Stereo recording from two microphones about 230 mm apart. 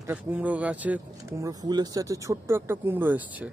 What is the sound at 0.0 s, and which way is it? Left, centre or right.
Speech, centre.